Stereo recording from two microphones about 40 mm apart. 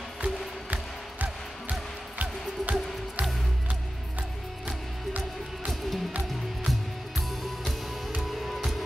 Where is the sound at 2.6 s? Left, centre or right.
Right.